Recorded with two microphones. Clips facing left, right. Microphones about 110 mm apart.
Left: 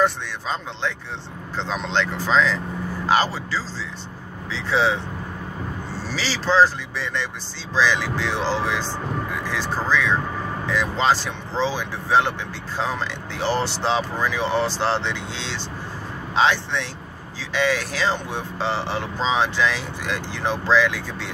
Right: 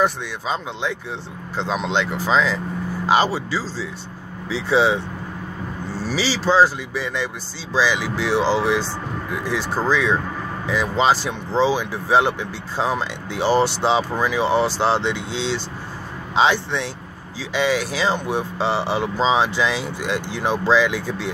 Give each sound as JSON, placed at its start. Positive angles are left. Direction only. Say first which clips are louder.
{"t": 0.0, "sound": "speech", "louder": "right 1 dB", "side_deg": -10}
{"t": 6.0, "sound": "speech", "louder": "right 4 dB", "side_deg": -10}